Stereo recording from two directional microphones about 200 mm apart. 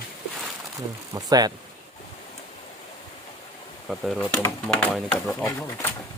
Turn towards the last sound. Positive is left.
turn(degrees=10)  # may be behind; listen again after turning